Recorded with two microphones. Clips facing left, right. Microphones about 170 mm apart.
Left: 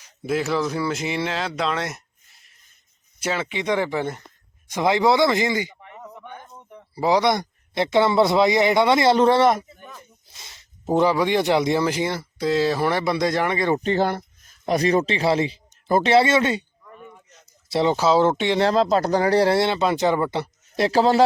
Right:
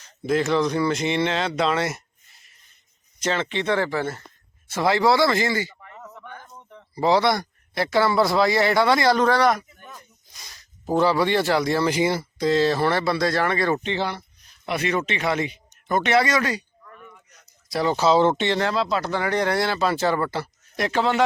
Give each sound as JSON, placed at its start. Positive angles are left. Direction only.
{"t": 0.0, "sound": "speech", "side_deg": 10}
{"t": 3.2, "sound": "speech", "side_deg": 10}
{"t": 11.9, "sound": "speech", "side_deg": -5}
{"t": 12.4, "sound": "speech", "side_deg": 10}
{"t": 13.8, "sound": "speech", "side_deg": 45}
{"t": 16.8, "sound": "a sound", "side_deg": 25}
{"t": 17.9, "sound": "speech", "side_deg": 10}
{"t": 18.6, "sound": "speech", "side_deg": 45}